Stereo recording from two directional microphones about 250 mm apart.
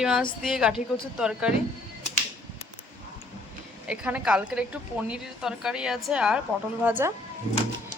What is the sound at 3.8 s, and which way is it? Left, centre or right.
A woman's voice, centre.